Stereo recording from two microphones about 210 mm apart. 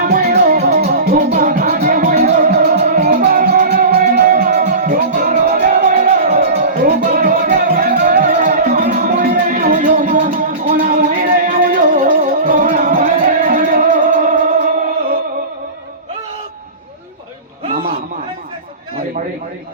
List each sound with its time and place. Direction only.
0.0 s music: 40° right (ahead or behind)
6.3 s music: 50° right (ahead or behind)
17.7 s a sound: 45° right (ahead or behind)